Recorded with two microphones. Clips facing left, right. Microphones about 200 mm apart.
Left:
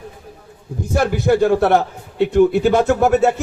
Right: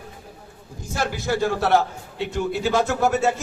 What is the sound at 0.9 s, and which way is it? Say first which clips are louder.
A man's voice: left 8 dB; 55° left (ahead or behind).